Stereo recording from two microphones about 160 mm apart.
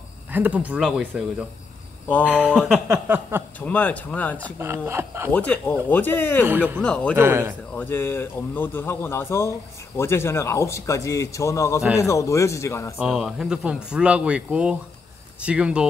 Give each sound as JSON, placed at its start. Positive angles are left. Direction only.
{"t": 0.3, "sound": "speech", "side_deg": -10}
{"t": 2.0, "sound": "a man's voice", "side_deg": 10}
{"t": 2.9, "sound": "speech", "side_deg": -15}
{"t": 3.5, "sound": "a man's voice", "side_deg": 10}
{"t": 4.6, "sound": "speech", "side_deg": -15}
{"t": 5.3, "sound": "a man's voice", "side_deg": 10}
{"t": 7.2, "sound": "speech", "side_deg": -15}
{"t": 7.7, "sound": "a man's voice", "side_deg": 10}
{"t": 12.9, "sound": "speech", "side_deg": -5}